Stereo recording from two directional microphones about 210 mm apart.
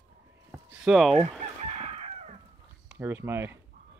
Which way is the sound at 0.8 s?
Centre (ahead or behind).